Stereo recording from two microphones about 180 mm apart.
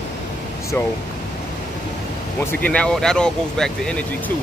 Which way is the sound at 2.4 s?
10° left (ahead or behind).